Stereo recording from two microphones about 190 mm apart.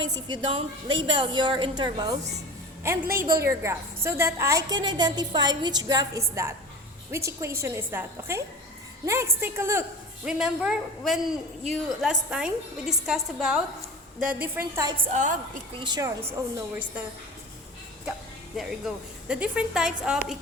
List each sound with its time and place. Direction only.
0.0 s a woman's voice: 25° right (ahead or behind)
15.1 s a woman's voice: 40° right (ahead or behind)
15.9 s a woman's voice: 20° right (ahead or behind)
18.5 s a woman's voice: 5° right (ahead or behind)